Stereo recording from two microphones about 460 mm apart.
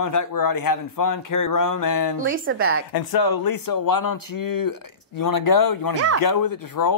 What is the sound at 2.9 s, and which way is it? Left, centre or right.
Speech, left.